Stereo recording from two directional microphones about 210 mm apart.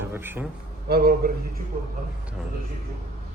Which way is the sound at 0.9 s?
45° right (ahead or behind).